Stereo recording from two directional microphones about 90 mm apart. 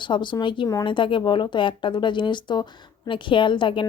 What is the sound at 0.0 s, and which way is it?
Speech, 60° left (ahead or behind).